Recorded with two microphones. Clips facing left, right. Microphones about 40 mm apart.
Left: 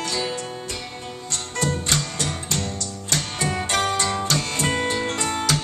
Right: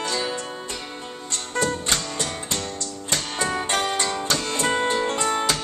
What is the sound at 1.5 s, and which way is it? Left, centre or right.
Music, centre.